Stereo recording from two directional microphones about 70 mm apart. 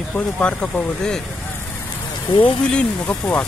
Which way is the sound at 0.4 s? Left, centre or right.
Centre.